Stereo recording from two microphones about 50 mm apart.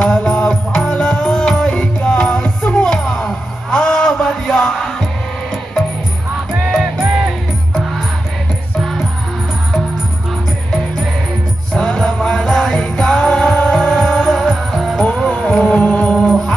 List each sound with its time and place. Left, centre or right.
0.0 s music: centre
6.5 s music: centre
11.7 s music: centre
15.0 s music: left
16.2 s music: centre